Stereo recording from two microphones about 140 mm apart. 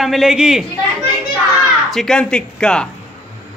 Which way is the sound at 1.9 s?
5° left (ahead or behind).